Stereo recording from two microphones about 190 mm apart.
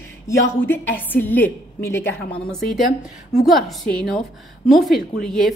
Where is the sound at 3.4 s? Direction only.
Centre (ahead or behind).